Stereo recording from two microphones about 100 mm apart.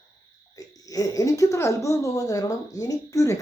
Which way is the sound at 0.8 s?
35° left (ahead or behind).